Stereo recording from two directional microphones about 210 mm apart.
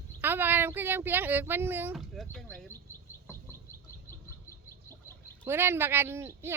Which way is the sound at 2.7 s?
10° left (ahead or behind).